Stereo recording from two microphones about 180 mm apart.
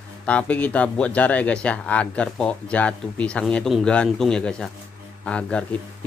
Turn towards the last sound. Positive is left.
turn(degrees=5)  # may be behind; listen again after turning